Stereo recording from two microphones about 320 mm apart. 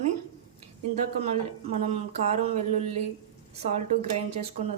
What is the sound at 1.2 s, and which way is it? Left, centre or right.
A woman's voice, centre.